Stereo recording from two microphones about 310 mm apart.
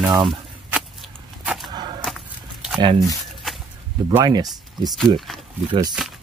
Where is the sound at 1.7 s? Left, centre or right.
Centre.